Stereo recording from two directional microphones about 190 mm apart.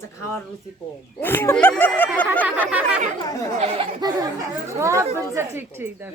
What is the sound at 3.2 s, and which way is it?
Speech, 20° left (ahead or behind).